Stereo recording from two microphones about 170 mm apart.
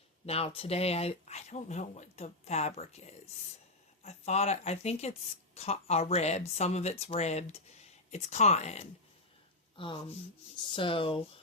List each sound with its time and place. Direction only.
0.3 s speech: 35° left (ahead or behind)